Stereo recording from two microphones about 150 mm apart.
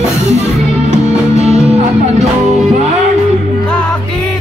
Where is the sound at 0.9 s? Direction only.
45° right (ahead or behind).